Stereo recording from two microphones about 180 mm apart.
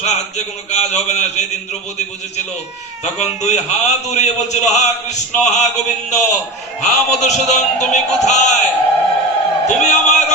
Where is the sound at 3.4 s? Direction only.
40° left (ahead or behind).